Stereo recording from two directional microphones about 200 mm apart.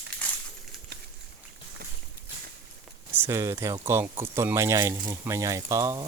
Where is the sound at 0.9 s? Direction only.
55° right (ahead or behind).